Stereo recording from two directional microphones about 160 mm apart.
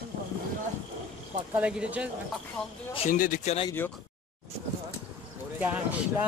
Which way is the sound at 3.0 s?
55° left (ahead or behind).